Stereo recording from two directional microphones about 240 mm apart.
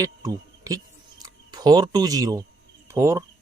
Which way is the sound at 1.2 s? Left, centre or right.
Centre.